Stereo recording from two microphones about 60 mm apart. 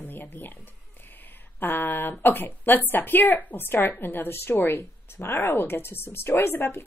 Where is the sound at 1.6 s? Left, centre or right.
Left.